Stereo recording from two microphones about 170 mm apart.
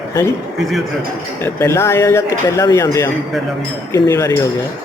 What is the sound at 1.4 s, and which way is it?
Speech, 15° left (ahead or behind).